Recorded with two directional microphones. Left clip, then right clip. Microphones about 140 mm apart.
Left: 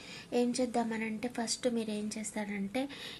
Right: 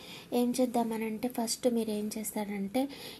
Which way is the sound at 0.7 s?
35° right (ahead or behind).